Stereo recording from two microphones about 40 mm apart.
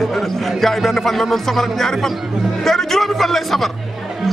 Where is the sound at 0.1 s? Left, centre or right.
Centre.